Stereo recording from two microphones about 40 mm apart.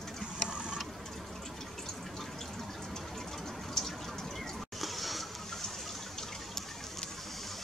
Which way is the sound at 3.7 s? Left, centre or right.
Centre.